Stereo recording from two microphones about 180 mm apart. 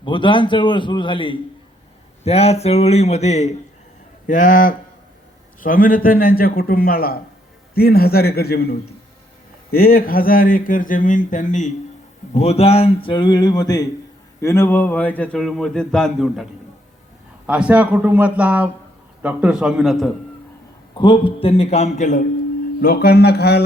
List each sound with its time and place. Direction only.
0.0 s a sound: 25° left (ahead or behind)
2.2 s a man's voice: 35° left (ahead or behind); by 8.7 s 60° left (ahead or behind)
9.7 s speech: 55° left (ahead or behind)
12.3 s a sound: 35° left (ahead or behind)
14.4 s a man's voice: 15° left (ahead or behind)
20.9 s a man's voice: 25° left (ahead or behind); by 22.2 s 40° left (ahead or behind)
22.8 s a man's voice: 55° left (ahead or behind)